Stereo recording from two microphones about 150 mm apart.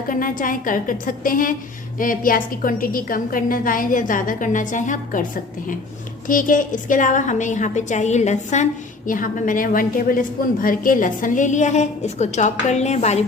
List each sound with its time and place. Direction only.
0.1 s a woman's voice: 65° left (ahead or behind)
6.2 s a woman's voice: 65° left (ahead or behind)
9.0 s a woman's voice: 65° left (ahead or behind)